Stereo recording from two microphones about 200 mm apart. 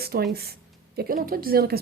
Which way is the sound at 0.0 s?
50° right (ahead or behind).